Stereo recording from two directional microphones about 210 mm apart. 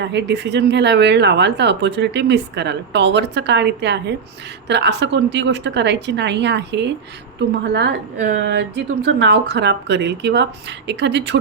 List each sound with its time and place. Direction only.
0.0 s speech: 55° right (ahead or behind)